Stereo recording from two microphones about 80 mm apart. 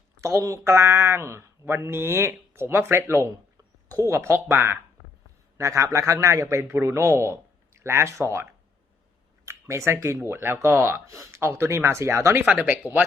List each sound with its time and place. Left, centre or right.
0.2 s speech: right
0.7 s speech: right
9.5 s speech: right
12.5 s speech: centre